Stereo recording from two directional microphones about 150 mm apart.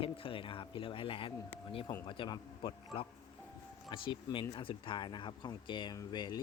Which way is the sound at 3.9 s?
35° left (ahead or behind).